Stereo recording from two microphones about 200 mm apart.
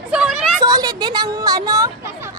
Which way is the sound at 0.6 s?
20° right (ahead or behind).